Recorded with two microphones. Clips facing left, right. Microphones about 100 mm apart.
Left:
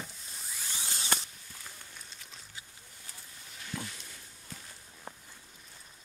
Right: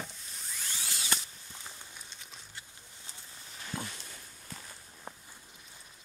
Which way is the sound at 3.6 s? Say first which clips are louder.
Right 1 dB; 30° right (ahead or behind).